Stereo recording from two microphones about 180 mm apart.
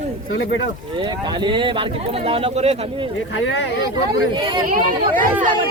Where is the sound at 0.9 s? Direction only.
25° right (ahead or behind).